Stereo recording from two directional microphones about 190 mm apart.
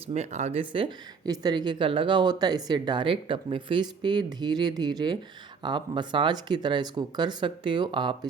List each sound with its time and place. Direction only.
0.1 s a woman's voice: 35° right (ahead or behind)